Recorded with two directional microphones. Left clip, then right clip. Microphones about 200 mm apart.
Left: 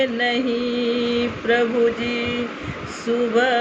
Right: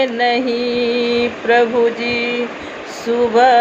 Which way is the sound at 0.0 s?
5° left (ahead or behind).